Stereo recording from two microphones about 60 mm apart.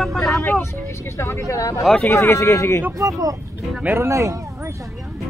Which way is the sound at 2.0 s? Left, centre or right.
Left.